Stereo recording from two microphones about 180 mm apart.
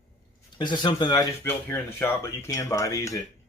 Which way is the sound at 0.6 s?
25° left (ahead or behind).